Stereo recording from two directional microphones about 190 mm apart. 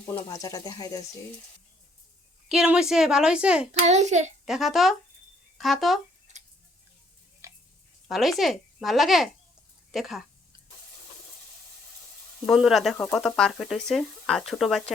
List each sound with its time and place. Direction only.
0.0 s speech: 15° left (ahead or behind)
2.5 s speech: 5° right (ahead or behind)
3.7 s a child's voice: 35° right (ahead or behind)
4.4 s speech: centre (ahead or behind)
6.3 s tick-tock: 40° right (ahead or behind)
7.4 s a sound: 15° right (ahead or behind)
8.0 s speech: centre (ahead or behind)
12.5 s speech: centre (ahead or behind)